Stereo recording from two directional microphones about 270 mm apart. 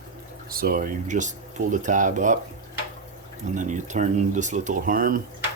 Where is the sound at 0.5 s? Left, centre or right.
Right.